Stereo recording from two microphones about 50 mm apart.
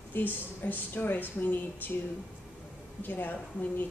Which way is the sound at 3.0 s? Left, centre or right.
Left.